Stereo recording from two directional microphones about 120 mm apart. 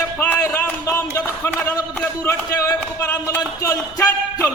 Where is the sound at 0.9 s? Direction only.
25° left (ahead or behind).